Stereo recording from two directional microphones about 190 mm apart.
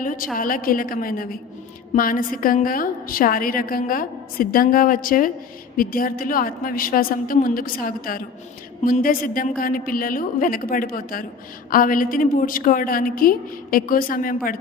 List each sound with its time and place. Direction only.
0.0 s a woman's voice: 45° left (ahead or behind)